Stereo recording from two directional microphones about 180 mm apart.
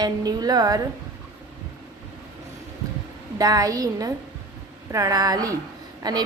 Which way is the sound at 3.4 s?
20° right (ahead or behind).